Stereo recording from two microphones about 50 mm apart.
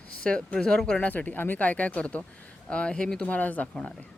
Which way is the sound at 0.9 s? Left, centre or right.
Left.